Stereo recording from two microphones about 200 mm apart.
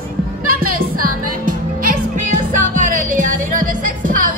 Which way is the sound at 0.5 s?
45° right (ahead or behind).